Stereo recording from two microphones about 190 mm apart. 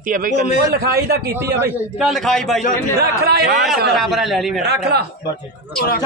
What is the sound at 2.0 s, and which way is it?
Speech, centre (ahead or behind).